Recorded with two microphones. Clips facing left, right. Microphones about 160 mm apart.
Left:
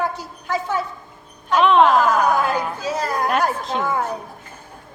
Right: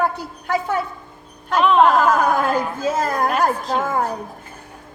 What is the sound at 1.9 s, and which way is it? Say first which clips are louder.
A woman's voice: even; 50° right (ahead or behind).